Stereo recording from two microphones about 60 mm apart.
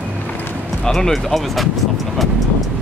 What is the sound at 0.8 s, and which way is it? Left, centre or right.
Speech, centre.